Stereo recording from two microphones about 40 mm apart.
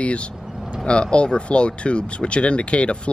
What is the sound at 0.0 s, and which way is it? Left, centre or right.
A man's voice, left.